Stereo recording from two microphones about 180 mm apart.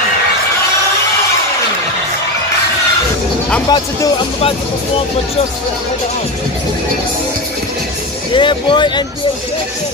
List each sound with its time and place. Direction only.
3.6 s speech: 25° left (ahead or behind)
8.3 s speech: 25° left (ahead or behind)